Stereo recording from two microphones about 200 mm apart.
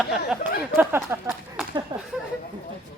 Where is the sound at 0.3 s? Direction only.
5° right (ahead or behind).